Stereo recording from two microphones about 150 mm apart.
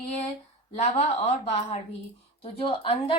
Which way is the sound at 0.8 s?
45° left (ahead or behind).